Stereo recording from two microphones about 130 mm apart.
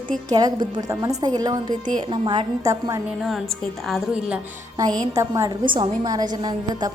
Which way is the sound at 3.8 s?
Centre (ahead or behind).